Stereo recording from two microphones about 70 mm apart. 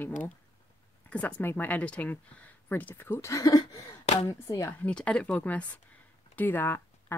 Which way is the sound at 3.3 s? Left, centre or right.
Left.